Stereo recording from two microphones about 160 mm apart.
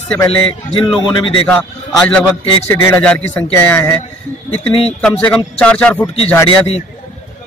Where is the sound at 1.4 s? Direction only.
5° left (ahead or behind).